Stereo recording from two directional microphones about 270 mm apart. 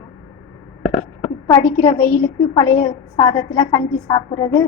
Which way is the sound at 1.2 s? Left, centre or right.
Centre.